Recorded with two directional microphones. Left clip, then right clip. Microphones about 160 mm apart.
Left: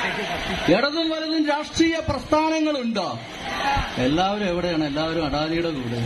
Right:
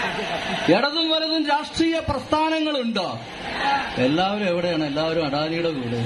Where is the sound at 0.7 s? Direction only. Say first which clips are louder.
Right 1 dB; 70° left (ahead or behind); by 3.1 s 35° left (ahead or behind).